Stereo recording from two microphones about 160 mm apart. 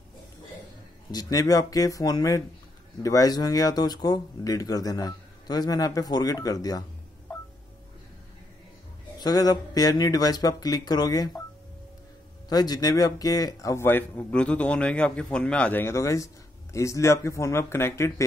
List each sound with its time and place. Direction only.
1.1 s speech: 20° left (ahead or behind)
9.2 s speech: 25° left (ahead or behind)
12.4 s a man's voice: 25° left (ahead or behind)